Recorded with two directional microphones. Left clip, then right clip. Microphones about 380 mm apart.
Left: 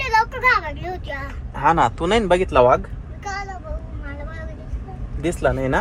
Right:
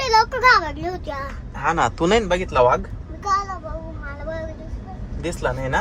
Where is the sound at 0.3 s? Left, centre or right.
Right.